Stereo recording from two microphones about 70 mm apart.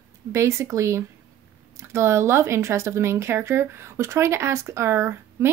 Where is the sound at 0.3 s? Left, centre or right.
Right.